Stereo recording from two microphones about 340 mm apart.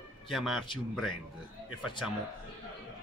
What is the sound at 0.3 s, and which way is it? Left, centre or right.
Speech, centre.